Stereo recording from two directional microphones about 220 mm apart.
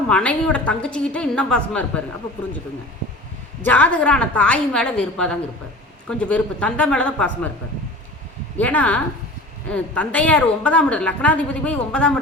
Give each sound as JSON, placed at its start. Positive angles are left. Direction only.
{"t": 0.1, "sound": "a woman's voice", "side_deg": 5}
{"t": 3.6, "sound": "a woman's voice", "side_deg": 5}
{"t": 8.5, "sound": "a woman's voice", "side_deg": 5}